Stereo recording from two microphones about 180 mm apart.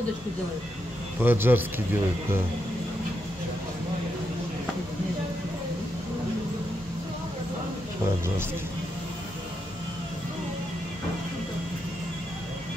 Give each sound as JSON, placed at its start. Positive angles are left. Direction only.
{"t": 1.2, "sound": "a man's voice", "side_deg": -10}